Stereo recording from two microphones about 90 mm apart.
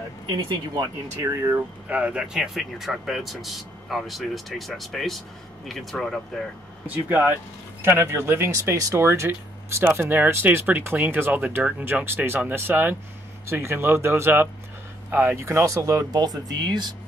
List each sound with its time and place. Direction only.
1.2 s speech: 30° right (ahead or behind)
1.9 s speech: 15° right (ahead or behind); by 6.4 s centre (ahead or behind)
6.9 s speech: 20° right (ahead or behind); by 16.2 s 35° right (ahead or behind)
16.2 s speech: 50° right (ahead or behind)